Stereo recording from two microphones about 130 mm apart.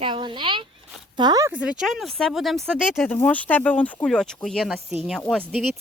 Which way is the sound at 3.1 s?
15° left (ahead or behind).